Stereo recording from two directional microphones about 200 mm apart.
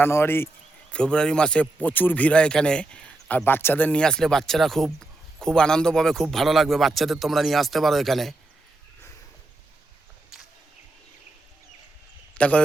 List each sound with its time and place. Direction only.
0.0 s a man's voice: 10° left (ahead or behind)
12.3 s a man's voice: 5° left (ahead or behind)